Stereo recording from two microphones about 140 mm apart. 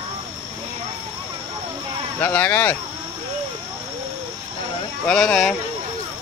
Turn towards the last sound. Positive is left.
turn(degrees=5)  # may be behind; listen again after turning